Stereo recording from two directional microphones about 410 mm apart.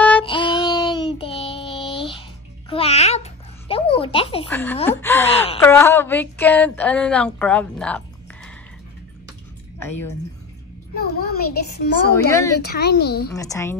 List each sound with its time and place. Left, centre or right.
0.0 s child singing: centre
2.7 s babbling: centre
11.0 s a child's voice: left
13.3 s a woman's voice: centre